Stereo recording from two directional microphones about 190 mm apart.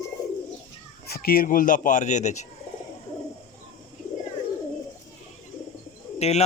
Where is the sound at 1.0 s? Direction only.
55° left (ahead or behind); by 2.4 s 40° left (ahead or behind).